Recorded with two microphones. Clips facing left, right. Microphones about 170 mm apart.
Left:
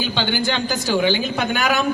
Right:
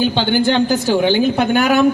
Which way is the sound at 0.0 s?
55° right (ahead or behind).